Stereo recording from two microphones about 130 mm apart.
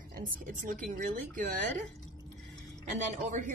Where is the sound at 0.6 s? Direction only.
90° right.